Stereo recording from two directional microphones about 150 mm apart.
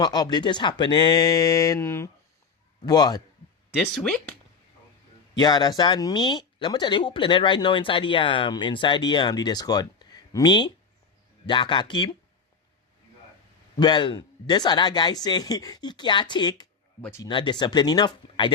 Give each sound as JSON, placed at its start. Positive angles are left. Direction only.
{"t": 0.0, "sound": "speech", "side_deg": 30}
{"t": 3.9, "sound": "speech", "side_deg": 5}
{"t": 5.4, "sound": "speech", "side_deg": 30}
{"t": 13.7, "sound": "speech", "side_deg": 30}
{"t": 17.0, "sound": "speech", "side_deg": 15}
{"t": 17.2, "sound": "speech", "side_deg": 30}